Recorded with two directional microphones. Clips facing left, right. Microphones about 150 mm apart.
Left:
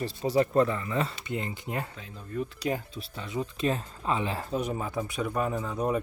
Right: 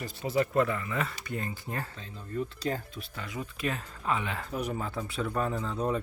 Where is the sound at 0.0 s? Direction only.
35° left (ahead or behind); by 3.2 s 15° left (ahead or behind).